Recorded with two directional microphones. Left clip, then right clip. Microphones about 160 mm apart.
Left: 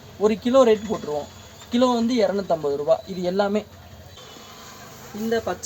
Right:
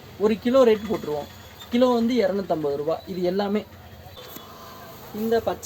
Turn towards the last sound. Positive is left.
turn(degrees=-25)  # may be behind; listen again after turning